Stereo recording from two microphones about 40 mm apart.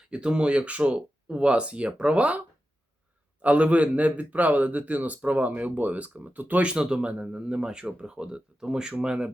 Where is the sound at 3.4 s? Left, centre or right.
Right.